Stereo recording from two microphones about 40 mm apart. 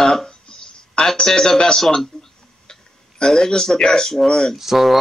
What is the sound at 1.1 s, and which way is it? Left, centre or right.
Speech, centre.